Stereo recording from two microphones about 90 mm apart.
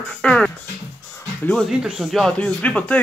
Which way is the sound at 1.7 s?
5° right (ahead or behind).